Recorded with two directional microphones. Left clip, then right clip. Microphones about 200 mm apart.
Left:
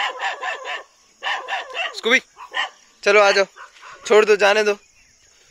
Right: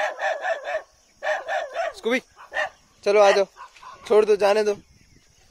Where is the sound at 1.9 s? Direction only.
5° right (ahead or behind).